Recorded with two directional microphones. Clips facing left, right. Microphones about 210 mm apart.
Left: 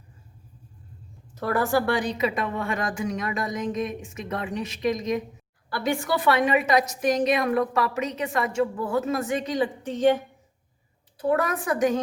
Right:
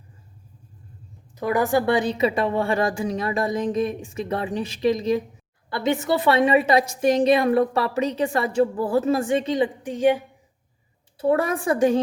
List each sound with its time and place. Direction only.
1.4 s a woman's voice: 15° right (ahead or behind)
9.8 s a woman's voice: 10° right (ahead or behind)
11.2 s a woman's voice: 30° right (ahead or behind)